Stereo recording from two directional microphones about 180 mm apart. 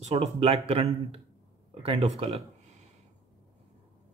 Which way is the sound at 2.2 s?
35° right (ahead or behind).